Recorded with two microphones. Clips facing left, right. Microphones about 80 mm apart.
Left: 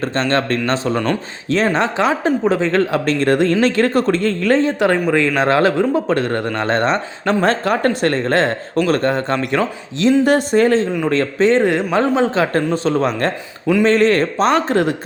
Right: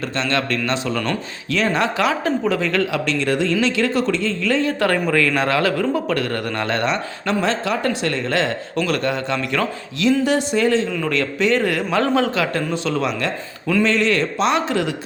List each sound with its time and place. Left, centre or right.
0.0 s speech: left
4.6 s a man's voice: left
9.6 s a man's voice: left
10.2 s a man's voice: left